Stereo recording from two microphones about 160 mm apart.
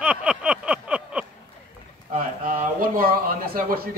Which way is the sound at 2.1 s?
55° right (ahead or behind).